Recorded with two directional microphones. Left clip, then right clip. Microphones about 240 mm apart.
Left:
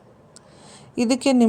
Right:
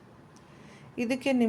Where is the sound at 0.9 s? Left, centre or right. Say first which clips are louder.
Left 8 dB; left.